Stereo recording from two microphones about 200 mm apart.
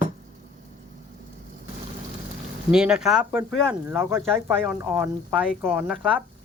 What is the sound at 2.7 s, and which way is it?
A man's voice, 5° right (ahead or behind).